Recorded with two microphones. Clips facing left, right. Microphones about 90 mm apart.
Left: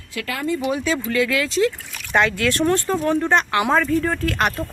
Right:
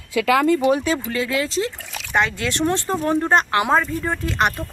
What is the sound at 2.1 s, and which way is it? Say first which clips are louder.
Speech: left 2 dB; 20° right (ahead or behind).